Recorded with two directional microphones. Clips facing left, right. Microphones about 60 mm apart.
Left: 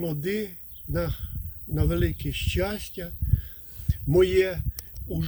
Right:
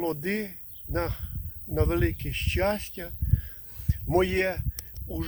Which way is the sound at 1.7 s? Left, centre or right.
Right.